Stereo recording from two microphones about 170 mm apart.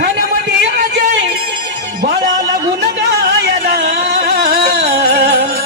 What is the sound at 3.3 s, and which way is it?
Music, 75° right (ahead or behind).